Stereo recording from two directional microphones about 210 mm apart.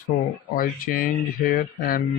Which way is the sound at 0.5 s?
40° left (ahead or behind).